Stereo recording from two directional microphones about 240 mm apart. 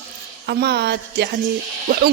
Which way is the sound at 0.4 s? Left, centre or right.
Right.